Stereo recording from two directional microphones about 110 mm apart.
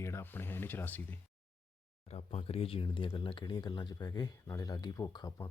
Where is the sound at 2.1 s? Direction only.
65° left (ahead or behind).